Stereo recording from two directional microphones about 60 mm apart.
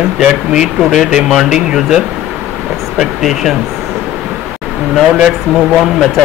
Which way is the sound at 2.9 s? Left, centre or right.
Centre.